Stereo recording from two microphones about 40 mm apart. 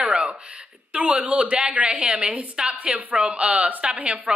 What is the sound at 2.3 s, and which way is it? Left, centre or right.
A woman's voice, right.